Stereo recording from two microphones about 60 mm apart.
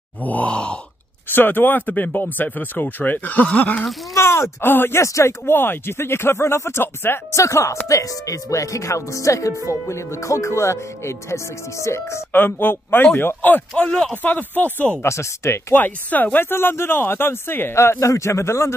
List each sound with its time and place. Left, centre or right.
0.2 s speech: left
1.3 s speech: left
4.1 s speech: left
5.0 s speech: left
5.4 s speech: left
7.3 s speech: left
12.3 s speech: left
15.0 s speech: left
15.7 s speech: left